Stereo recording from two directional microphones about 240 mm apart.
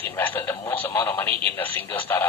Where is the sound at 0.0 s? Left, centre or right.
Centre.